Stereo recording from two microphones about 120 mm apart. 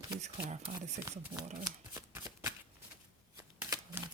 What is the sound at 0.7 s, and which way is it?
Speech, 75° right (ahead or behind).